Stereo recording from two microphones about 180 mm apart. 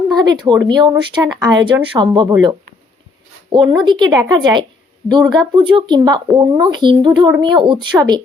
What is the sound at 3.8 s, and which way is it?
Speech, 25° right (ahead or behind).